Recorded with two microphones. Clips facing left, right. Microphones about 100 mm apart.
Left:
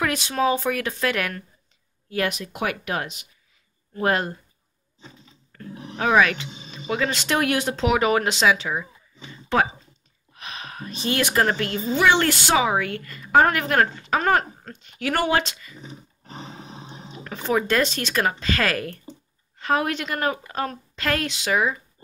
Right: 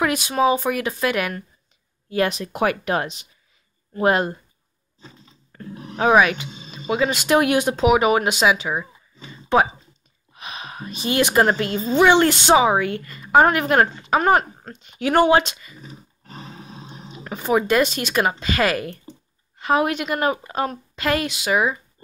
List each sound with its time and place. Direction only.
0.0 s a woman's voice: 15° right (ahead or behind)
2.0 s speech: 30° right (ahead or behind)
3.9 s a woman's voice: 20° right (ahead or behind)
5.5 s a sound: 20° right (ahead or behind)
5.9 s a woman's voice: 20° right (ahead or behind)
15.8 s roar: 20° left (ahead or behind)
17.1 s a woman's voice: 15° right (ahead or behind)